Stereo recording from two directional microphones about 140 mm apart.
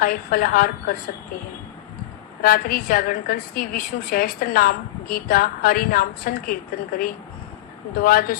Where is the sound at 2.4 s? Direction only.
90° left.